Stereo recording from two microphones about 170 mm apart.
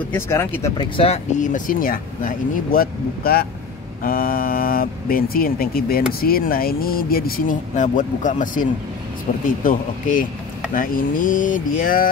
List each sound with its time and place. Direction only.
0.1 s speech: 15° left (ahead or behind)
0.7 s speech: 35° left (ahead or behind)
1.4 s speech: 50° left (ahead or behind)